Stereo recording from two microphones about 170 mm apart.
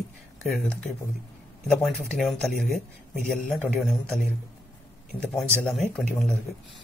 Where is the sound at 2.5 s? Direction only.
55° left (ahead or behind).